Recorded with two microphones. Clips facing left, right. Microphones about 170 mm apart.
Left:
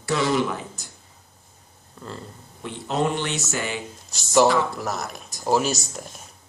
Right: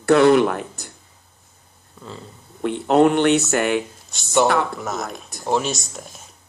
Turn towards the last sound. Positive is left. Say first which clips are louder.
# even
turn(degrees=0)  # may be behind; listen again after turning